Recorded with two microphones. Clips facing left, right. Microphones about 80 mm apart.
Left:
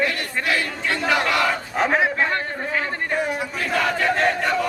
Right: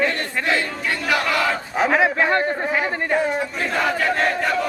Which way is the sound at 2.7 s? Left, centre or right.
Centre.